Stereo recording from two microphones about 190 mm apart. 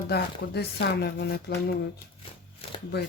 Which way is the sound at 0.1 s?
60° left (ahead or behind).